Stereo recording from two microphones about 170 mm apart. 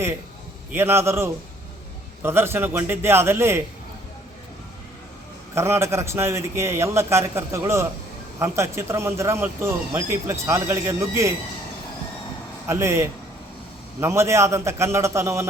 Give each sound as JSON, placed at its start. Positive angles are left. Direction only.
{"t": 0.7, "sound": "speech", "side_deg": -15}
{"t": 5.5, "sound": "speech", "side_deg": -15}
{"t": 12.6, "sound": "speech", "side_deg": -15}